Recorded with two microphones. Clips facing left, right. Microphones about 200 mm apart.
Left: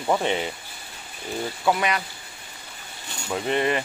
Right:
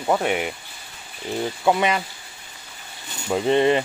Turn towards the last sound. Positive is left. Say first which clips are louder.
# right 6 dB
turn(degrees=-25)  # may be behind; listen again after turning